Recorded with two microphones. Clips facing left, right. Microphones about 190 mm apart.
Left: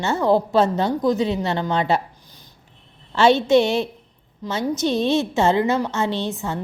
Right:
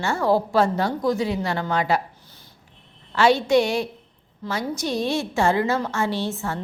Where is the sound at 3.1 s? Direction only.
25° left (ahead or behind).